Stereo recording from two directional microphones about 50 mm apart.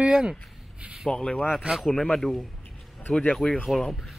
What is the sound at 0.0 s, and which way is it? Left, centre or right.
Rub, centre.